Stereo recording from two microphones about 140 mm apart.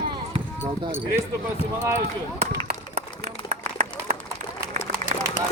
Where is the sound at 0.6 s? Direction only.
15° right (ahead or behind).